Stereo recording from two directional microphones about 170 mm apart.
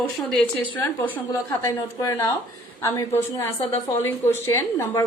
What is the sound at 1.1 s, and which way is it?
Speech, 15° left (ahead or behind).